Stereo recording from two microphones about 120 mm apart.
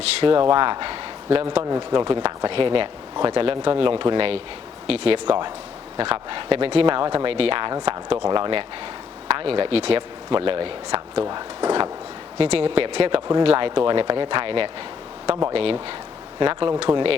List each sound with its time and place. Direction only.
0.2 s a man's voice: 45° right (ahead or behind)
11.3 s speech: 35° right (ahead or behind)
12.4 s speech: 50° right (ahead or behind)